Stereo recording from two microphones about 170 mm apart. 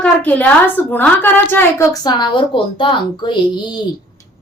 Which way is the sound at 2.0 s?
25° left (ahead or behind).